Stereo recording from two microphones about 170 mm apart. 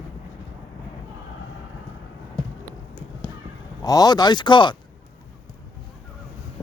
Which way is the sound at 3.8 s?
20° left (ahead or behind).